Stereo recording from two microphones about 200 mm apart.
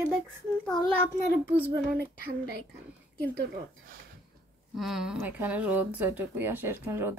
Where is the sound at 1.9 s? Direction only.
50° right (ahead or behind).